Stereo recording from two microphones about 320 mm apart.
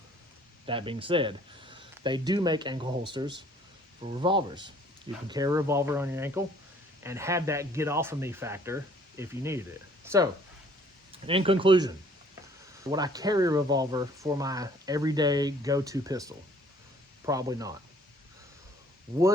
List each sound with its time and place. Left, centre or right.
0.6 s speech: centre
11.1 s speech: centre